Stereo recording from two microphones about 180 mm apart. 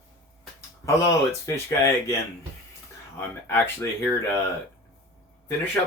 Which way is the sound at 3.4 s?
10° left (ahead or behind).